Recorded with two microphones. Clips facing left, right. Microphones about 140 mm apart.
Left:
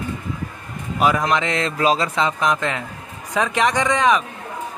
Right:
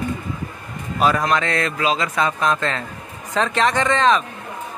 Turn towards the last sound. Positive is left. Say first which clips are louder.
# even
turn(degrees=15)  # may be behind; listen again after turning